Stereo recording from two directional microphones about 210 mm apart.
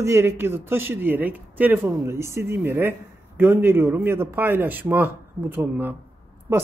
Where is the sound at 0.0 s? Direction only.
15° right (ahead or behind).